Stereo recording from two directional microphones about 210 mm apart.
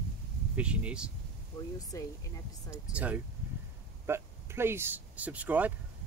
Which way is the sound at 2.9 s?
5° right (ahead or behind).